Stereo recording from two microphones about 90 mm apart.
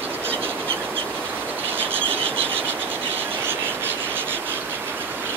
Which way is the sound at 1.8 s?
20° right (ahead or behind).